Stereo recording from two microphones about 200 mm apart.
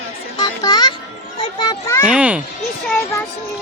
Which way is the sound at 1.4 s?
20° left (ahead or behind).